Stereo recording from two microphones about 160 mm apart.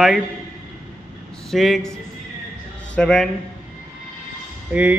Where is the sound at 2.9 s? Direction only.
5° left (ahead or behind).